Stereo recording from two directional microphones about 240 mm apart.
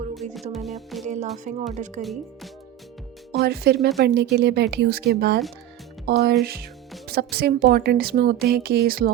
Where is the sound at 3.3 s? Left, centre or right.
Right.